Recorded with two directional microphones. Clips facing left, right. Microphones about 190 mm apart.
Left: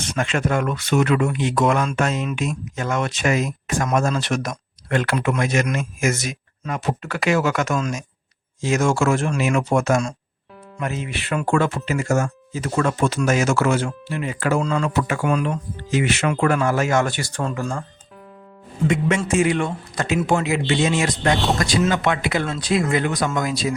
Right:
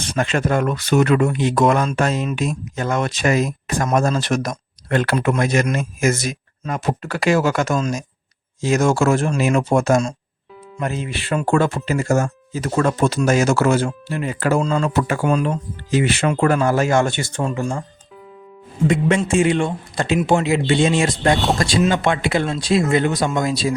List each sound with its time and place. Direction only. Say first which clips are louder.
0.1 s speech: right 3 dB; 35° right (ahead or behind); by 17.7 s 15° right (ahead or behind)
18.9 s speech: right 3 dB; 35° right (ahead or behind)
21.3 s speech: right 2 dB; centre (ahead or behind)
21.8 s speech: right 2 dB; 30° right (ahead or behind)